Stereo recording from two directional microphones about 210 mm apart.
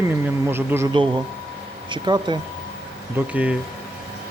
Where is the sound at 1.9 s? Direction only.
20° right (ahead or behind).